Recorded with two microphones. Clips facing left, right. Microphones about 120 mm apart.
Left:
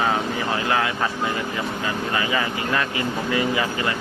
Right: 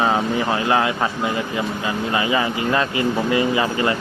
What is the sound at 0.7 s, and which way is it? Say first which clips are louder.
Speech: right 3 dB; 25° right (ahead or behind).